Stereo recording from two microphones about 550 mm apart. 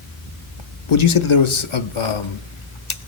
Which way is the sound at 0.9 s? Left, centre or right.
Left.